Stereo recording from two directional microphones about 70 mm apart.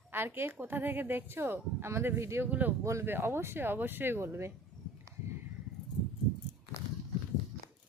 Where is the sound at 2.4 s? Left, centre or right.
Right.